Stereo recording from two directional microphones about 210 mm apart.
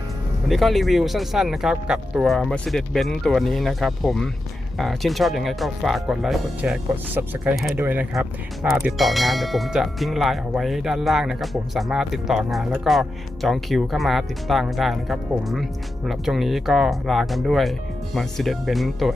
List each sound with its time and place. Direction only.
0.4 s speech: centre (ahead or behind)